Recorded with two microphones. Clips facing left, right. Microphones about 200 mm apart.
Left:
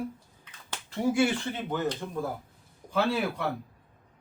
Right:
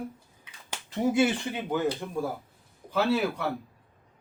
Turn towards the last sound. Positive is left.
turn(degrees=0)  # may be behind; listen again after turning